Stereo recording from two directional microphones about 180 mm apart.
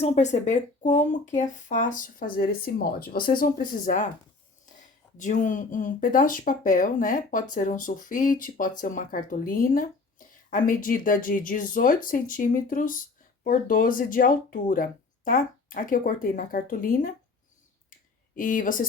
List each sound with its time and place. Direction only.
0.0 s speech: 40° left (ahead or behind)
5.1 s speech: 45° left (ahead or behind)
18.3 s speech: 50° left (ahead or behind)